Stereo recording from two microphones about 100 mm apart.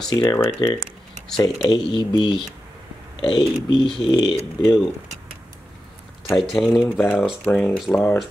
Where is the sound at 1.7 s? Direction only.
50° left (ahead or behind).